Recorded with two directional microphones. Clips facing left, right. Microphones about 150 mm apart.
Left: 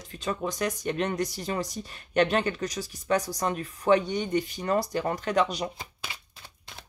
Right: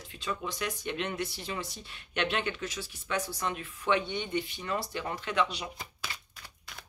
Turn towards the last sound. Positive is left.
turn(degrees=20)  # may be behind; listen again after turning